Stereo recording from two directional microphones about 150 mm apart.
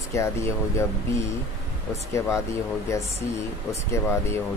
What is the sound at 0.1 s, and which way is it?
Speech, 20° left (ahead or behind).